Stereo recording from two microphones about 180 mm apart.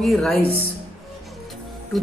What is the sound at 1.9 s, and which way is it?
Speech, centre (ahead or behind).